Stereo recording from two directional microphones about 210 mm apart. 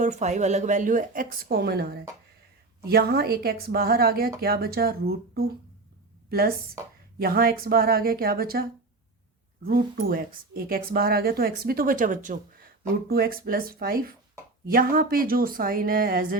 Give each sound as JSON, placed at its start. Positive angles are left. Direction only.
{"t": 0.0, "sound": "a woman's voice", "side_deg": -35}
{"t": 7.2, "sound": "a woman's voice", "side_deg": -45}
{"t": 9.6, "sound": "a woman's voice", "side_deg": -45}